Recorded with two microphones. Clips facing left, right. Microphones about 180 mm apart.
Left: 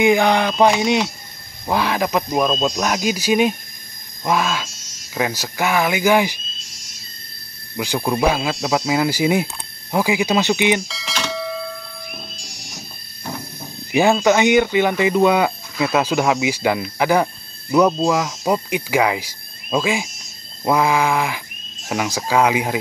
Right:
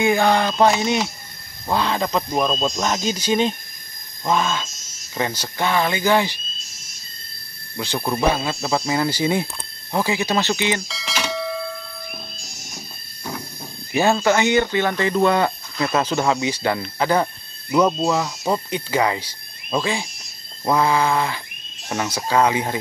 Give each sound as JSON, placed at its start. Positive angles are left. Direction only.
{"t": 0.0, "sound": "speech", "side_deg": 15}
{"t": 2.3, "sound": "speech", "side_deg": 0}
{"t": 7.7, "sound": "speech", "side_deg": 10}
{"t": 10.9, "sound": "bell", "side_deg": 0}
{"t": 13.9, "sound": "speech", "side_deg": 15}
{"t": 17.6, "sound": "speech", "side_deg": 0}
{"t": 18.5, "sound": "speech", "side_deg": 10}